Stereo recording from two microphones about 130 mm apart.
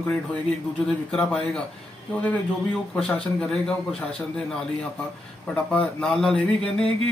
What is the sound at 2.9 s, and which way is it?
Speech, 5° left (ahead or behind).